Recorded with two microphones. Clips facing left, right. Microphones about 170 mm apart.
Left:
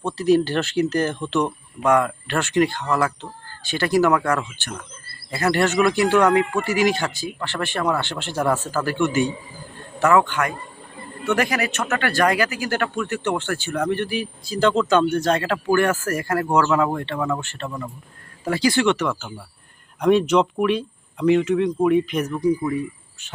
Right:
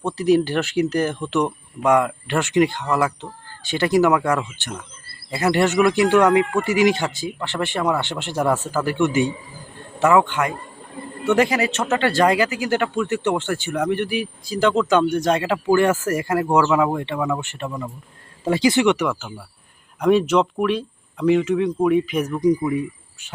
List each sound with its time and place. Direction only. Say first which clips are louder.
0.0 s speech: even; 15° right (ahead or behind)
8.4 s speech: right 1 dB; centre (ahead or behind)
8.6 s speech: right 2 dB; 20° right (ahead or behind)